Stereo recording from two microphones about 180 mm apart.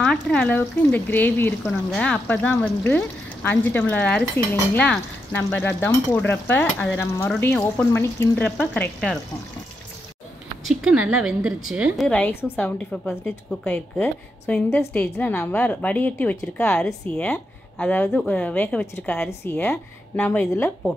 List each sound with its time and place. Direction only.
0.0 s a woman's voice: 5° left (ahead or behind)
10.7 s a woman's voice: 5° right (ahead or behind)
12.1 s a woman's voice: 10° left (ahead or behind)